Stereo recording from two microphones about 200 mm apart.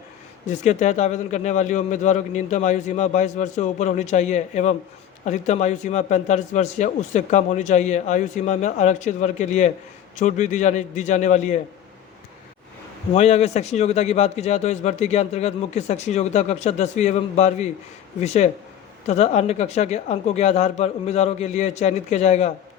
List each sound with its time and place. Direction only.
0.4 s a man's voice: 35° left (ahead or behind)
13.1 s a man's voice: 35° left (ahead or behind)